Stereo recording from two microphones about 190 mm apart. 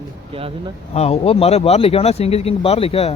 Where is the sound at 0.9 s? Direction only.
35° left (ahead or behind).